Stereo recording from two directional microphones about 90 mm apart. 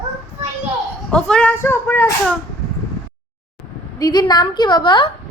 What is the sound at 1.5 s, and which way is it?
Speech, 25° left (ahead or behind).